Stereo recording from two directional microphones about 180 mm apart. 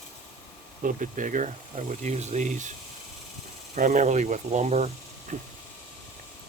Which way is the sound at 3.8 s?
45° right (ahead or behind).